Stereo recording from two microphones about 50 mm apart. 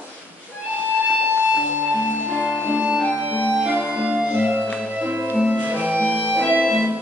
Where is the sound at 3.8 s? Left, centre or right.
Right.